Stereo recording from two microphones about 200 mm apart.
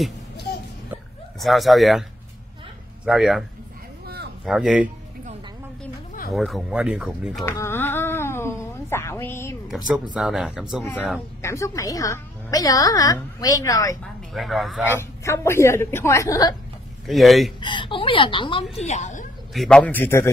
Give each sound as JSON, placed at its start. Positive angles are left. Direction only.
{"t": 1.4, "sound": "speech", "side_deg": 0}
{"t": 3.1, "sound": "speech", "side_deg": 0}
{"t": 4.0, "sound": "a sound", "side_deg": -50}
{"t": 4.5, "sound": "speech", "side_deg": -5}
{"t": 6.3, "sound": "speech", "side_deg": 0}
{"t": 7.4, "sound": "a sound", "side_deg": 10}
{"t": 9.7, "sound": "speech", "side_deg": -5}
{"t": 10.8, "sound": "a woman's voice", "side_deg": 15}
{"t": 14.3, "sound": "speech", "side_deg": 0}
{"t": 14.9, "sound": "a woman's voice", "side_deg": 15}
{"t": 17.0, "sound": "speech", "side_deg": 0}
{"t": 17.6, "sound": "a woman's voice", "side_deg": 25}
{"t": 19.5, "sound": "a woman's voice", "side_deg": 0}